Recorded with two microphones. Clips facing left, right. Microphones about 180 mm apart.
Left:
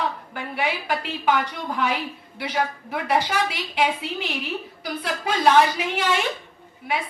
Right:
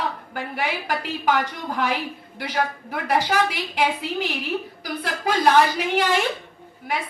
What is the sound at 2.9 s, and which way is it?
Speech, 45° right (ahead or behind).